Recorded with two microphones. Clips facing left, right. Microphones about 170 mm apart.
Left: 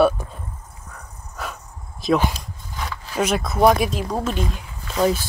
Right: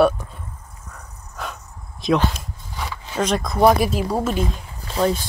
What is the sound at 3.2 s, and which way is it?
Speech, 5° left (ahead or behind).